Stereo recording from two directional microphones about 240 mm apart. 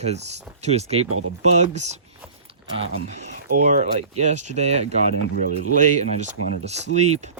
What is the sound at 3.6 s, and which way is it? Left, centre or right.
Speech, right.